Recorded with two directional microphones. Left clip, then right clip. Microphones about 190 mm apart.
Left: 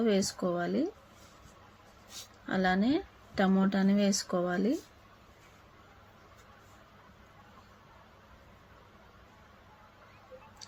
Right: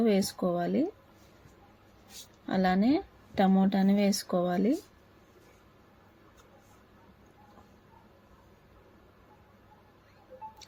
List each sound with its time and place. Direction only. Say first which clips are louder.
0.0 s speech: right 2 dB; 20° right (ahead or behind)
2.5 s speech: right 2 dB; 20° right (ahead or behind)